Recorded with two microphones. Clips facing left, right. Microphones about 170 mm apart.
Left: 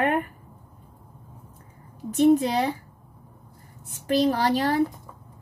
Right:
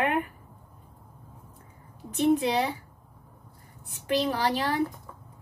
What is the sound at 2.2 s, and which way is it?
Speech, 45° left (ahead or behind).